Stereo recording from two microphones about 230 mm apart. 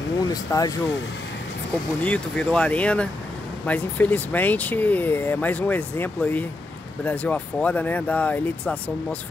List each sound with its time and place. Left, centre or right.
0.3 s speech: centre
2.0 s speech: centre